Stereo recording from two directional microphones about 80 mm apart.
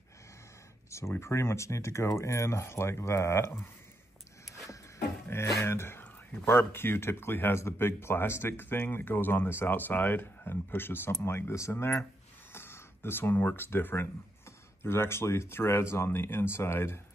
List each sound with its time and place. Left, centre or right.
0.8 s a sound: left
1.2 s speech: left
4.6 s speech: left